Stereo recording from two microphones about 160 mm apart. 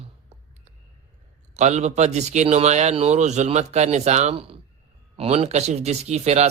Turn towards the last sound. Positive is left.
turn(degrees=-40)  # may be behind; listen again after turning